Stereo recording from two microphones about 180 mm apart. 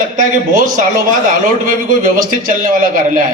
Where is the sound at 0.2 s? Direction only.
45° right (ahead or behind).